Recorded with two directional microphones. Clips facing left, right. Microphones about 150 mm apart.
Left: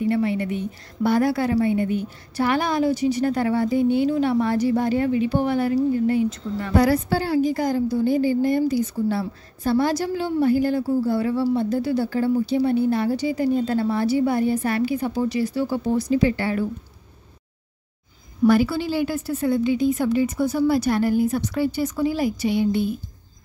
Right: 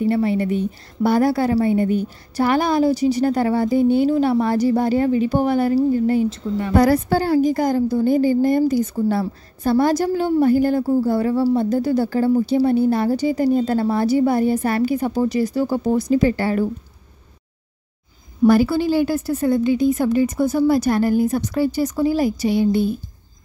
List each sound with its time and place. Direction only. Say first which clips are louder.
0.0 s a woman's voice: right 3 dB; 35° right (ahead or behind)
6.7 s a woman's voice: right 3 dB; 50° right (ahead or behind)
18.4 s a woman's voice: right 3 dB; 40° right (ahead or behind)